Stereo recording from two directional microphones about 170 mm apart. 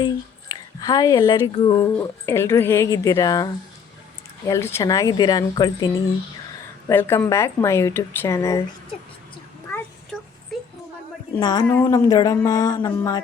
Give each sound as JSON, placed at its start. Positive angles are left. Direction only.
{"t": 0.0, "sound": "speech", "side_deg": 20}
{"t": 6.8, "sound": "speech", "side_deg": 15}
{"t": 10.5, "sound": "a sound", "side_deg": 0}
{"t": 11.3, "sound": "speech", "side_deg": 25}